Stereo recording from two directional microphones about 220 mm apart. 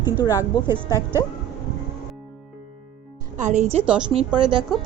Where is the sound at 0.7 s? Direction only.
10° right (ahead or behind).